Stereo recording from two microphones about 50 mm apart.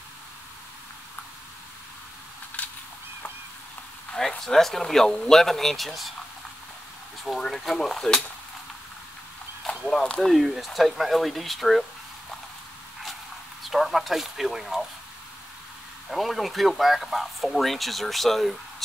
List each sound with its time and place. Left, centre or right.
2.6 s a sound: left
4.5 s speech: centre
7.3 s speech: centre
9.7 s speech: centre
10.3 s speech: centre
13.7 s speech: centre
16.1 s speech: centre